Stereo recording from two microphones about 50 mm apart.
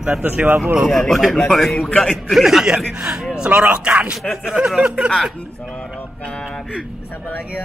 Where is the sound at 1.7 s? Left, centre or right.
Centre.